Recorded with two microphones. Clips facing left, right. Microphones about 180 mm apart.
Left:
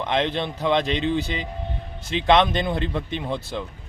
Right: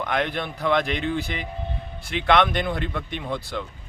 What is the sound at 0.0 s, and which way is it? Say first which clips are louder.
Speech: left 2 dB; 25° left (ahead or behind).